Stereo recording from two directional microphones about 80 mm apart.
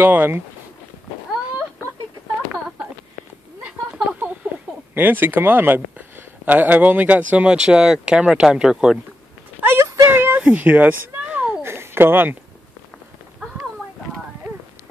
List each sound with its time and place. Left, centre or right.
0.0 s speech: right
3.6 s a sound: centre
4.9 s speech: right; by 9.0 s centre
9.6 s clip-clop: right
10.0 s a sound: right
11.6 s babbling: right